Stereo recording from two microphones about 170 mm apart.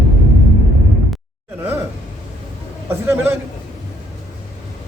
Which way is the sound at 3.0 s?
10° right (ahead or behind).